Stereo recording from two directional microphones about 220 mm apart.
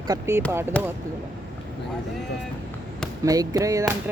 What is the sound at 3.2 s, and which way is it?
Speech, 15° right (ahead or behind).